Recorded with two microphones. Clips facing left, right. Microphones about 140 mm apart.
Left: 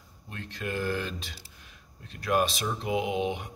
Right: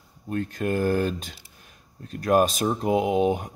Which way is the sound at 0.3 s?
45° right (ahead or behind).